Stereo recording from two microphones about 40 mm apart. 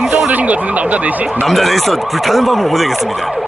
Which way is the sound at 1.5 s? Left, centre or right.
Centre.